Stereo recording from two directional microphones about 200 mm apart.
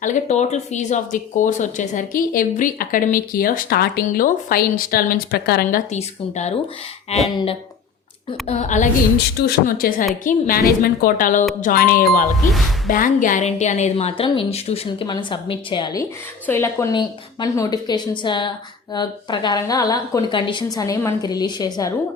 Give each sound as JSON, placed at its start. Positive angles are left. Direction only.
{"t": 0.0, "sound": "speech", "side_deg": 35}
{"t": 5.9, "sound": "speech", "side_deg": 35}
{"t": 8.4, "sound": "speech", "side_deg": 35}
{"t": 9.1, "sound": "a woman's voice", "side_deg": 50}